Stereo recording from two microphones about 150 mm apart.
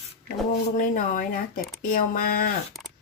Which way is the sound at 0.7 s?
60° left (ahead or behind).